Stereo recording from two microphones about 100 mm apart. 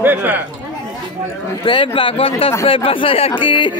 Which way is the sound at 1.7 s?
55° left (ahead or behind).